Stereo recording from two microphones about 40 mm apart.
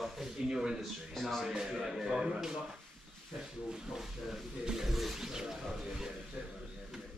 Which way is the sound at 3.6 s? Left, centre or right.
Centre.